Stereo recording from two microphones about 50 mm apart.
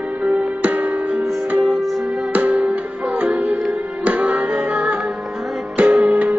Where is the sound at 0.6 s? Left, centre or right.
Right.